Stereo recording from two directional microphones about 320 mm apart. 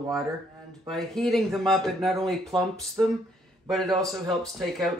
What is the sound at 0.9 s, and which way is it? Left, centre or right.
Speech, centre.